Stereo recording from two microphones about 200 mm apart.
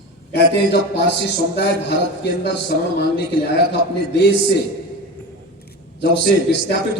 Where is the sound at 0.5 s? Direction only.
55° left (ahead or behind).